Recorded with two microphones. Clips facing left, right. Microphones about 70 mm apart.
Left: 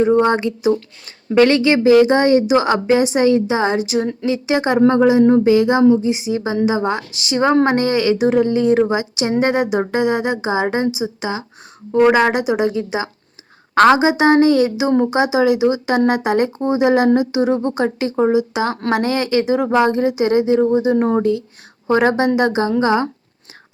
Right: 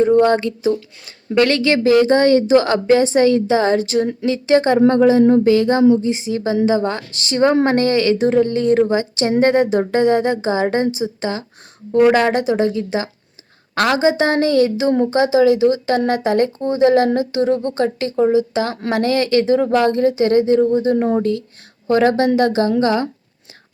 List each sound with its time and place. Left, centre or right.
0.0 s a woman's voice: centre
13.7 s speech: left
14.0 s a woman's voice: centre
20.6 s a woman's voice: left
20.9 s speech: left
21.2 s a woman's voice: left